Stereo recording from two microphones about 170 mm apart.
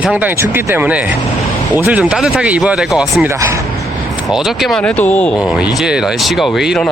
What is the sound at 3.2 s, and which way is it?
Speech, 15° right (ahead or behind).